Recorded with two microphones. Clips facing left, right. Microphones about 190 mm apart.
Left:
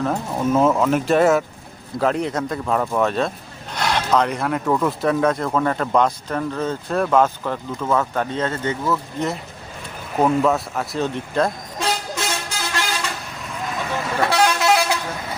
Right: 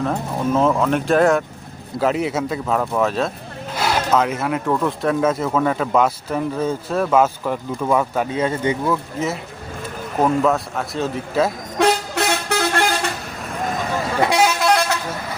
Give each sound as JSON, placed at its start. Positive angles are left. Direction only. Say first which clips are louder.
{"t": 0.0, "sound": "speech", "louder": "even", "side_deg": 5}
{"t": 11.8, "sound": "vehicle", "louder": "right 7 dB", "side_deg": -65}
{"t": 14.2, "sound": "vehicle", "louder": "right 2 dB", "side_deg": -15}
{"t": 14.4, "sound": "vehicle", "louder": "right 1 dB", "side_deg": 0}